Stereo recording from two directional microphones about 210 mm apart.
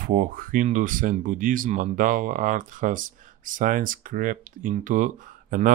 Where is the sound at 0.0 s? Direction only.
40° right (ahead or behind).